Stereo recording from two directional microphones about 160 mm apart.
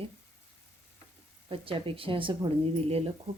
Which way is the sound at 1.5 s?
35° right (ahead or behind).